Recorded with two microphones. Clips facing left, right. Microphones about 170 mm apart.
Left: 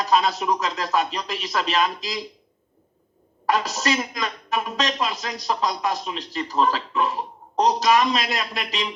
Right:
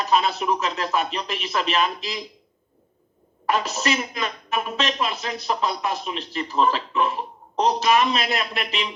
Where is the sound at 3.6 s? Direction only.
40° left (ahead or behind).